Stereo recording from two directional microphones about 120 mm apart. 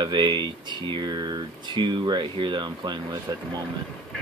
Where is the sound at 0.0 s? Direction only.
40° right (ahead or behind).